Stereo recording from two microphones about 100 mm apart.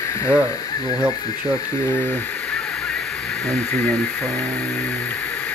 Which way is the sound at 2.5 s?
5° left (ahead or behind).